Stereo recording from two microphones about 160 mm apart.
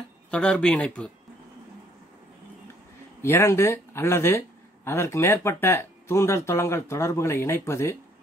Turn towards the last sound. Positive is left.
turn(degrees=15)  # may be behind; listen again after turning